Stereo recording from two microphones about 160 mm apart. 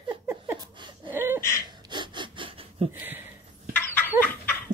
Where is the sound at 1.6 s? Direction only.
30° right (ahead or behind).